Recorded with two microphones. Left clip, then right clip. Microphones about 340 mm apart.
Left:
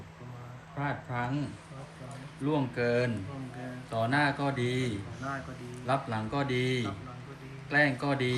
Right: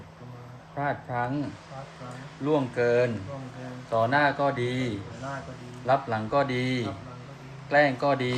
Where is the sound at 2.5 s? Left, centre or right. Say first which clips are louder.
Right 6 dB; right.